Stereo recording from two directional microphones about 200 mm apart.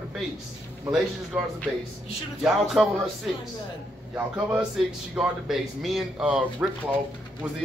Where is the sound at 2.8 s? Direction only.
Centre (ahead or behind).